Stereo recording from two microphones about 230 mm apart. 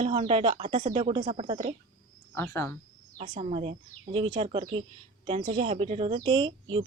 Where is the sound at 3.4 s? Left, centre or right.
Right.